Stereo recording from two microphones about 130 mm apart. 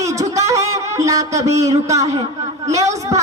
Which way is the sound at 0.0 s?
25° right (ahead or behind).